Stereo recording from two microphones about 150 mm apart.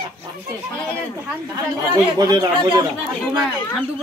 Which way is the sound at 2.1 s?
25° right (ahead or behind).